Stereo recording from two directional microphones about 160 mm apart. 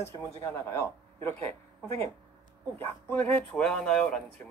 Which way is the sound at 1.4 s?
40° right (ahead or behind).